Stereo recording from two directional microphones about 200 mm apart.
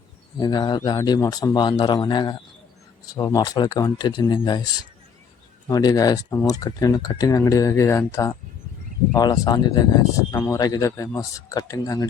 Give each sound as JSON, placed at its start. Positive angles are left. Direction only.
{"t": 0.3, "sound": "a man's voice", "side_deg": 20}